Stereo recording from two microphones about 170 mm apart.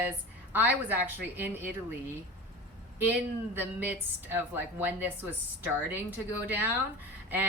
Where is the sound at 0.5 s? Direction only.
10° right (ahead or behind).